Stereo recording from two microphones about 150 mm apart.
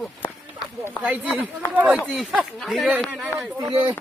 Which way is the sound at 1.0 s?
10° right (ahead or behind).